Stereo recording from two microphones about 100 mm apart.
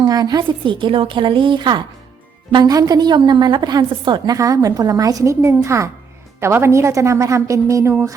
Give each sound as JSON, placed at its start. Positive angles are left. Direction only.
{"t": 0.0, "sound": "a woman's voice", "side_deg": -40}
{"t": 2.6, "sound": "a woman's voice", "side_deg": -40}
{"t": 4.4, "sound": "a woman's voice", "side_deg": -35}